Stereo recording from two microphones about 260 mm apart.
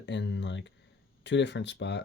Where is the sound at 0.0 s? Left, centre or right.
Left.